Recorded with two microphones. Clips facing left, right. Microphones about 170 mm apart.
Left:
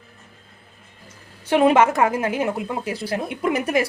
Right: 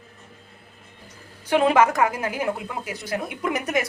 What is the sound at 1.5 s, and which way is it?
A woman's voice, 20° left (ahead or behind).